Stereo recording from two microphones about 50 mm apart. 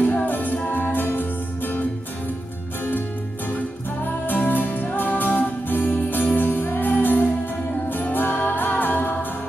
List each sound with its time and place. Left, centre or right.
0.0 s music: left
3.5 s music: left